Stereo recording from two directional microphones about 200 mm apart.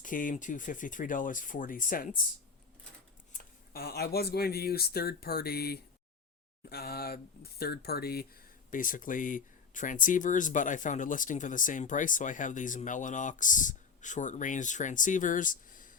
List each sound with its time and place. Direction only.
0.0 s speech: 40° left (ahead or behind)
3.3 s speech: 50° left (ahead or behind)